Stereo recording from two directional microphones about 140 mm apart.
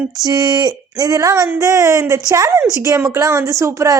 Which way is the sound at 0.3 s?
30° right (ahead or behind).